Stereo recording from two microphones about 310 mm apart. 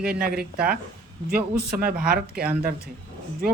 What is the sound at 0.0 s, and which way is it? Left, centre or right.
Speech, right.